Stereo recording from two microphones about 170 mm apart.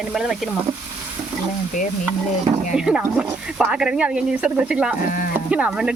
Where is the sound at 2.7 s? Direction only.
5° right (ahead or behind).